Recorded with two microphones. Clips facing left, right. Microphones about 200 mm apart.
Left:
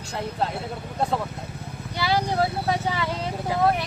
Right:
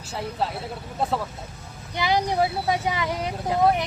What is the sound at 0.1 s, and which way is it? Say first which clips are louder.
Speech: even; 5° right (ahead or behind).